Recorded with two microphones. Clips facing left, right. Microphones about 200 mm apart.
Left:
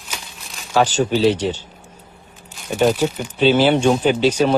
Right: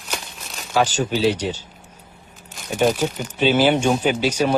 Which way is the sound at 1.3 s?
10° right (ahead or behind).